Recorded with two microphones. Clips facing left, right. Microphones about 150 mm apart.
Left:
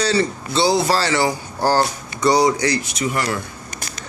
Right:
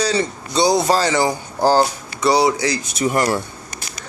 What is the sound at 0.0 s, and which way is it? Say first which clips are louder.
Speech: left 1 dB; 15° right (ahead or behind).